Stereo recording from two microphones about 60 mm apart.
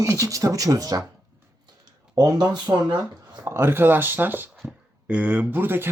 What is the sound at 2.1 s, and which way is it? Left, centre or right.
Speech, right.